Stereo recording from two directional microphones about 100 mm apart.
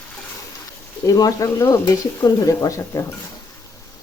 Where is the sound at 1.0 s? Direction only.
35° left (ahead or behind).